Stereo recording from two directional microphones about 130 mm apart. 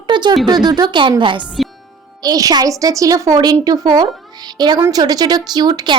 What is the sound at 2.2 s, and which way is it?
A woman's voice, 30° right (ahead or behind).